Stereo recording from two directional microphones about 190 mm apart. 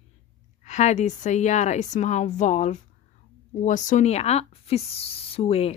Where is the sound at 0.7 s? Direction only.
40° left (ahead or behind).